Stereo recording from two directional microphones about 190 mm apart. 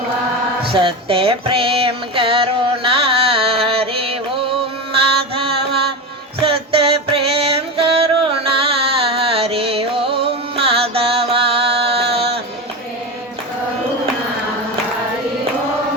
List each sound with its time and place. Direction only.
0.7 s a sound: 25° right (ahead or behind)
5.3 s mantra: 30° right (ahead or behind)
6.4 s music: 30° right (ahead or behind)